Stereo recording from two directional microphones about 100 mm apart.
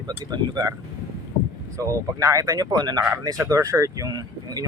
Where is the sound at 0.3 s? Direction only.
40° right (ahead or behind).